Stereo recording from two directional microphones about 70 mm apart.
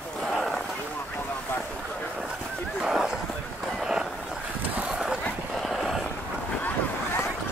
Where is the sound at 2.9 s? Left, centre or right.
Centre.